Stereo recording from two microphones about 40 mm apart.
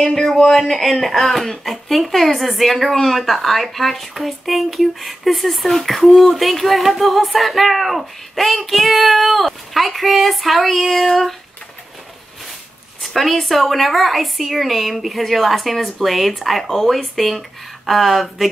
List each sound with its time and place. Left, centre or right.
0.0 s female singing: centre
13.0 s female singing: centre